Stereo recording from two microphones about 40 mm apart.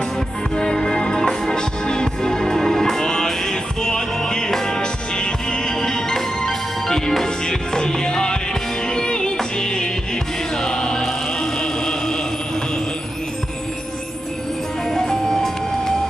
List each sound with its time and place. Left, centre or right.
0.6 s music: centre
10.6 s choir: centre
11.6 s a sound: centre
14.9 s music: centre